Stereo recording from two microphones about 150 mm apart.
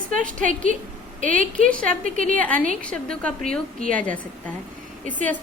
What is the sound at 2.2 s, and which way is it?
Speech, 60° right (ahead or behind).